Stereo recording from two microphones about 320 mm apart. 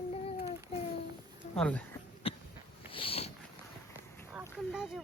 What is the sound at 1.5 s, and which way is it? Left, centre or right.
Speech, centre.